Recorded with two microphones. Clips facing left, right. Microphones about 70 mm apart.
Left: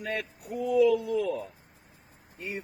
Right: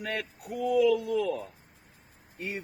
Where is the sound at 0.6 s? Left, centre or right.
Right.